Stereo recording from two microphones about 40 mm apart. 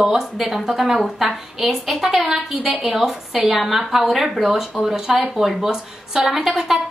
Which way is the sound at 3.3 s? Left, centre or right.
Centre.